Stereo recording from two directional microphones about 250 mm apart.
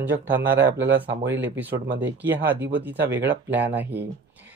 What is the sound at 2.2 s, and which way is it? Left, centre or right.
Speech, centre.